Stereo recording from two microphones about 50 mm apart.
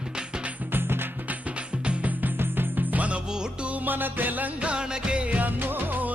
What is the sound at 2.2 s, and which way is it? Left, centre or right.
Music, right.